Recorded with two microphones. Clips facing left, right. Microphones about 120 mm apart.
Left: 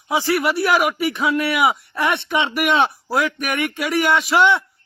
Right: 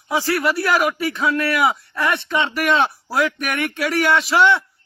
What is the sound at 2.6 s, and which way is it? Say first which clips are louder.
A man's voice: even; 5° left (ahead or behind).